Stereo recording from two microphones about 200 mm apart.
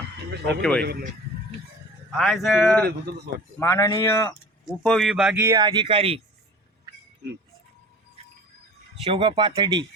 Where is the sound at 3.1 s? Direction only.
50° right (ahead or behind).